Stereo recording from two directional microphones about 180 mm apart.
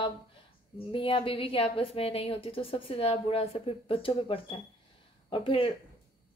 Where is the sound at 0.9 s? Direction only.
30° left (ahead or behind).